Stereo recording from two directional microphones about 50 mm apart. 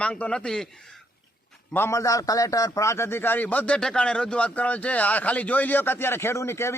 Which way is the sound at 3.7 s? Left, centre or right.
Centre.